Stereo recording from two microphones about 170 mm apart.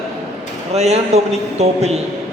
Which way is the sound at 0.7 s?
40° right (ahead or behind).